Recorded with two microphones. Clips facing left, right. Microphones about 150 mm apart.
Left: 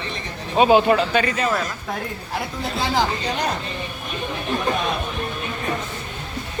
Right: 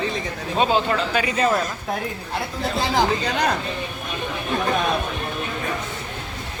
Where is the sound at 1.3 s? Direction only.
30° right (ahead or behind).